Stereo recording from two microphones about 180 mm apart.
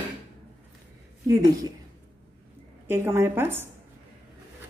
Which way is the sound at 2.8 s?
15° right (ahead or behind).